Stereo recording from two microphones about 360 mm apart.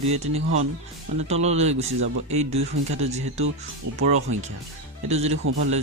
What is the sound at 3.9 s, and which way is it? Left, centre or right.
Speech, right.